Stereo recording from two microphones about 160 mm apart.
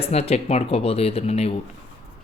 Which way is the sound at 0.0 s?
40° left (ahead or behind).